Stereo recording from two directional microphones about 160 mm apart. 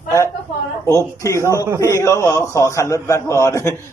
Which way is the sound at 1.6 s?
15° right (ahead or behind).